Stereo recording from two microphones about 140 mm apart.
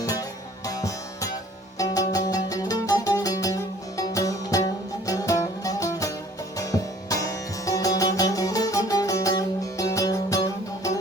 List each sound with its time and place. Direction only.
0.0 s music: 25° left (ahead or behind)